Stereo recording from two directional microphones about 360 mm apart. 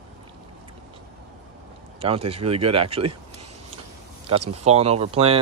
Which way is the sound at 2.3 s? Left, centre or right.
Centre.